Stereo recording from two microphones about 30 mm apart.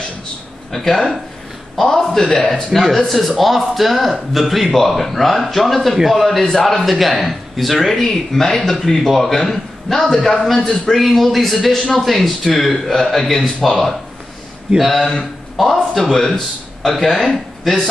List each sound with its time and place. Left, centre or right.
0.7 s a man's voice: centre
3.1 s speech: centre
8.0 s a man's voice: centre